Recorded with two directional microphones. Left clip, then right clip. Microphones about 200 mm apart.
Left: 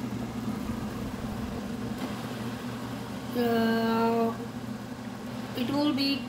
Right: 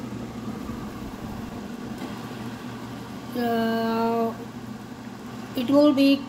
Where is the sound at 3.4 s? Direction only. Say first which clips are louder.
Right 2 dB; 30° right (ahead or behind).